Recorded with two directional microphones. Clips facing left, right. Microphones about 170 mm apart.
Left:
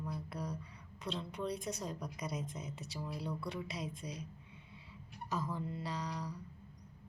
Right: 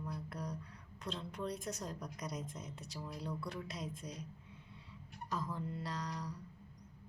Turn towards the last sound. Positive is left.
turn(degrees=0)  # may be behind; listen again after turning